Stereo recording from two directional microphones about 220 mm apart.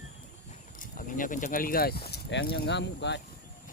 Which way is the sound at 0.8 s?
40° left (ahead or behind).